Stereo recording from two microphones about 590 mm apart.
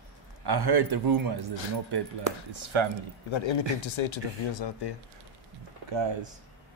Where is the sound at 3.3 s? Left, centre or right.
Left.